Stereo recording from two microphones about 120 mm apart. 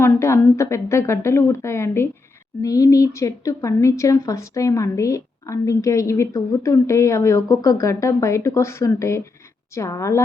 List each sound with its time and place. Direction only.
0.0 s speech: 20° left (ahead or behind)